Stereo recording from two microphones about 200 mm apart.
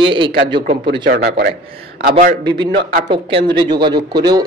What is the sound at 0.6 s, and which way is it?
Speech, 35° right (ahead or behind).